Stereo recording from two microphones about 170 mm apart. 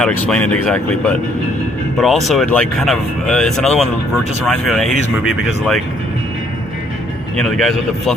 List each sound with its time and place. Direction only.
0.0 s speech: 5° left (ahead or behind)
7.3 s speech: centre (ahead or behind)